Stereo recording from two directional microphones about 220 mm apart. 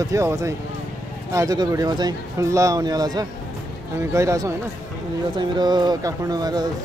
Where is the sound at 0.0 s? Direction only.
15° right (ahead or behind).